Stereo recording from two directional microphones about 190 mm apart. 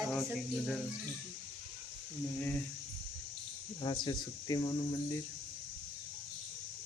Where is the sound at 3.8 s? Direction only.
25° left (ahead or behind).